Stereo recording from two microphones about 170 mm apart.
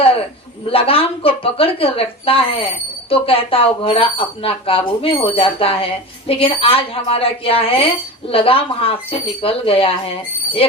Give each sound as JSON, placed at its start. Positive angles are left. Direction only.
{"t": 0.7, "sound": "a woman's voice", "side_deg": 35}